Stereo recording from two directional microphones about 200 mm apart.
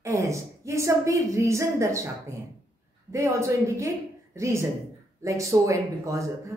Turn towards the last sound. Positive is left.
turn(degrees=-15)  # may be behind; listen again after turning